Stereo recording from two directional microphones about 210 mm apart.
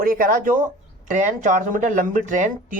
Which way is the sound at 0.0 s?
45° right (ahead or behind).